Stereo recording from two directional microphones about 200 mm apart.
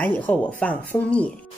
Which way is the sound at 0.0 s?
10° left (ahead or behind).